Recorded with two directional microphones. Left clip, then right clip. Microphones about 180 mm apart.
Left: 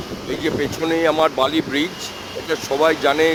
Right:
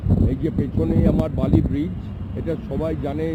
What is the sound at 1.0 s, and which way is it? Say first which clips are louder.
Speech: left 7 dB; 15° left (ahead or behind).